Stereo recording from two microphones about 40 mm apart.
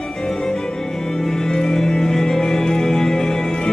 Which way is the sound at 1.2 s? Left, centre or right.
Centre.